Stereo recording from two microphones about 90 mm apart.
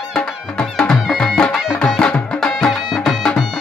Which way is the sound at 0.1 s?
5° left (ahead or behind).